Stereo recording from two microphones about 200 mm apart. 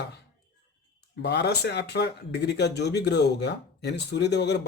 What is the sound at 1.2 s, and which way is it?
Speech, 55° left (ahead or behind).